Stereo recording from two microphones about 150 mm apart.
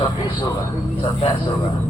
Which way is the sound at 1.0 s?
30° left (ahead or behind).